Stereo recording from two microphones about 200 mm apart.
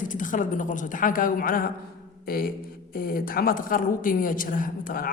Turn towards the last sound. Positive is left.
turn(degrees=45)  # may be behind; listen again after turning